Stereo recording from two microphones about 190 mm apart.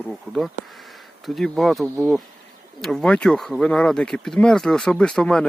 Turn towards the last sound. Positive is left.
turn(degrees=5)  # may be behind; listen again after turning